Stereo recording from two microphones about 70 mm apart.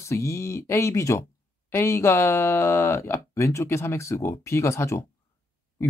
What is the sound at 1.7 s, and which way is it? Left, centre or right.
Speech, left.